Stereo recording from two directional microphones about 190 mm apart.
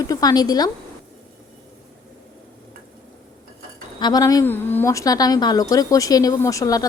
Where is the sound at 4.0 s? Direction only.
20° left (ahead or behind).